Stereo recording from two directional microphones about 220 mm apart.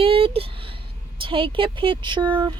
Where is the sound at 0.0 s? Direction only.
25° right (ahead or behind).